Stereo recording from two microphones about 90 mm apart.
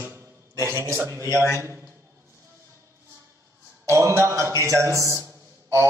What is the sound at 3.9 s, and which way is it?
A man's voice, 30° right (ahead or behind).